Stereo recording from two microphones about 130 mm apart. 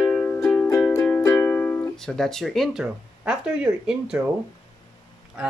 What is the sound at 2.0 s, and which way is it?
Speech, 5° left (ahead or behind).